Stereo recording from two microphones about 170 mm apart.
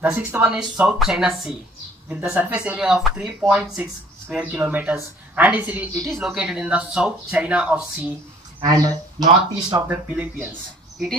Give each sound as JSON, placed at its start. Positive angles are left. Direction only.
{"t": 0.0, "sound": "speech", "side_deg": -10}
{"t": 8.5, "sound": "speech", "side_deg": -20}
{"t": 10.1, "sound": "speech", "side_deg": -10}